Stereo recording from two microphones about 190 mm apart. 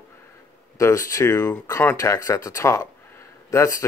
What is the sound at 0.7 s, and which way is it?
Speech, 15° left (ahead or behind).